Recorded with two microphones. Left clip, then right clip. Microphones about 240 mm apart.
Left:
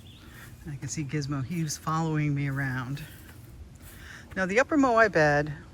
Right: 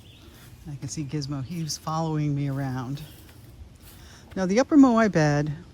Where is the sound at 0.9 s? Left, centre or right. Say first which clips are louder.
Right 1 dB; centre; by 5.5 s right.